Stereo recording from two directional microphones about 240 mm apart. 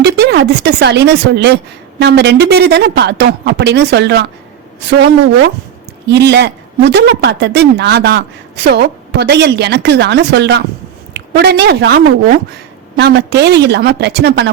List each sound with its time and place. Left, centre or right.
0.0 s speech: right